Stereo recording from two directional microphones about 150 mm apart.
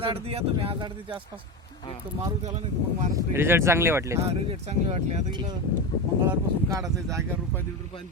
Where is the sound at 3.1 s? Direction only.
20° right (ahead or behind).